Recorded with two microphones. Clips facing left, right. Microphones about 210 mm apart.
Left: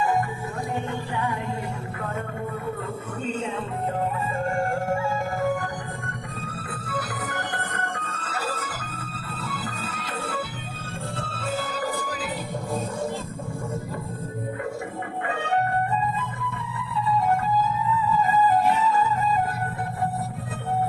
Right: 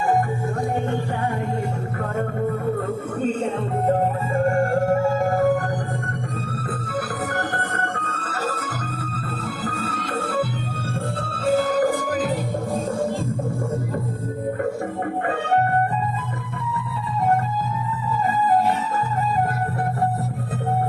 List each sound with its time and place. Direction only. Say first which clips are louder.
3.2 s music: right 5 dB; 45° right (ahead or behind)
7.3 s music: right 5 dB; 45° right (ahead or behind)
11.7 s music: right 9 dB; 50° right (ahead or behind)